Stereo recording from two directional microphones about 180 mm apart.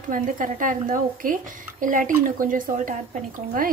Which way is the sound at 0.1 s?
50° right (ahead or behind).